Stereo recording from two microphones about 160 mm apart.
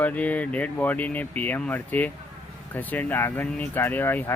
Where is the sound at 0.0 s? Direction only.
10° left (ahead or behind).